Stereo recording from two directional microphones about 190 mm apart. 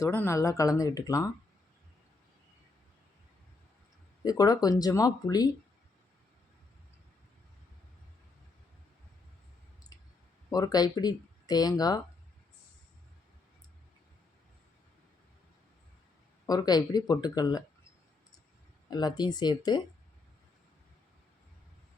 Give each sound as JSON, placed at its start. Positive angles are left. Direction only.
{"t": 0.0, "sound": "speech", "side_deg": 15}
{"t": 4.2, "sound": "speech", "side_deg": 20}
{"t": 10.5, "sound": "speech", "side_deg": 20}
{"t": 16.5, "sound": "speech", "side_deg": 20}
{"t": 18.9, "sound": "speech", "side_deg": 20}